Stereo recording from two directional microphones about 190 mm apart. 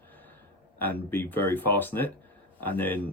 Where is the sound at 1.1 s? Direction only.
10° left (ahead or behind).